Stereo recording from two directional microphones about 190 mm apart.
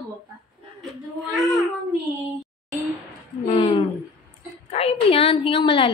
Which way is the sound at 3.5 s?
30° left (ahead or behind).